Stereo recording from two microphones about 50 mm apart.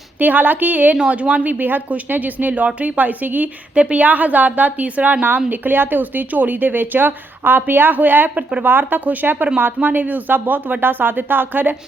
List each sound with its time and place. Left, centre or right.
0.2 s a woman's voice: right
0.9 s speech: right
1.5 s a woman's voice: right
5.5 s a woman's voice: right